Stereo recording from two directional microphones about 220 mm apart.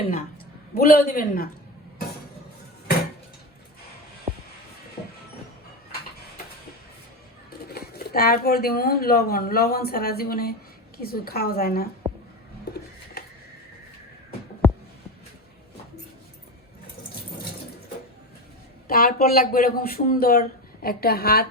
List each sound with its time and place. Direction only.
0.7 s speech: 45° left (ahead or behind)
7.6 s speech: 45° left (ahead or behind)
14.6 s a sound: 10° left (ahead or behind)
18.9 s speech: 40° left (ahead or behind)